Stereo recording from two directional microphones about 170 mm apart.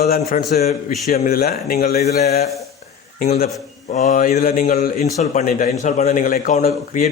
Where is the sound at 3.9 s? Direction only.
45° left (ahead or behind).